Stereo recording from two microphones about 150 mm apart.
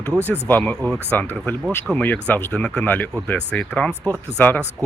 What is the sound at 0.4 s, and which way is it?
Speech, 10° left (ahead or behind).